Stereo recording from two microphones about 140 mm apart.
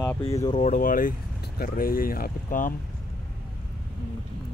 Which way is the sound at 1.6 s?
90° left.